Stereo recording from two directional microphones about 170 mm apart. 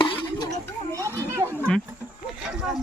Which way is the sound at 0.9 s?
15° right (ahead or behind).